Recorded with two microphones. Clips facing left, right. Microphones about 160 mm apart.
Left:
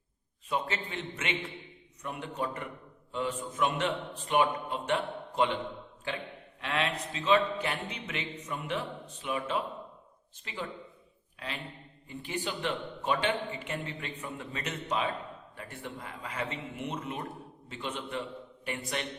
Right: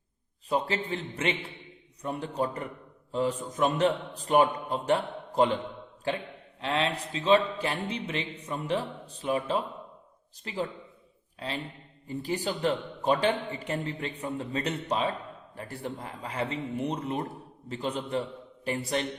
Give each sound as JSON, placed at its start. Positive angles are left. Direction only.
{"t": 0.4, "sound": "a man's voice", "side_deg": -35}
{"t": 6.6, "sound": "a man's voice", "side_deg": -30}